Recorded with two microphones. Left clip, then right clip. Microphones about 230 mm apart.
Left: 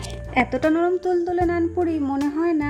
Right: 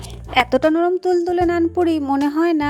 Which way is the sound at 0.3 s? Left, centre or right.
Centre.